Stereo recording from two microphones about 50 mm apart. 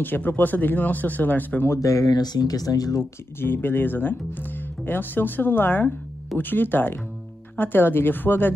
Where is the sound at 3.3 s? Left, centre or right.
Left.